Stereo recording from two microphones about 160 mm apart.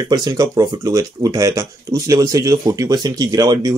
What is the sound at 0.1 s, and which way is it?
Speech, 25° right (ahead or behind).